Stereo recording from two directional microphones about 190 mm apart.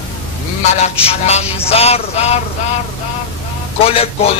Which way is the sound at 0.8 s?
35° left (ahead or behind).